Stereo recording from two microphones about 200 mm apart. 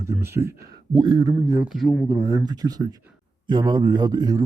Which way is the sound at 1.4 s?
15° right (ahead or behind).